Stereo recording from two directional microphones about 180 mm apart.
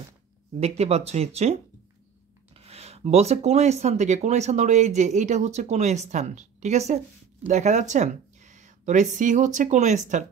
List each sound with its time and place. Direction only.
0.6 s speech: 35° right (ahead or behind)